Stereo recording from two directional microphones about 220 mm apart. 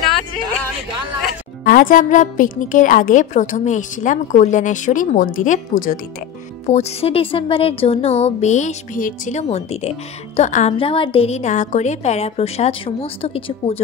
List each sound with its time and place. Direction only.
1.6 s a woman's voice: 40° left (ahead or behind)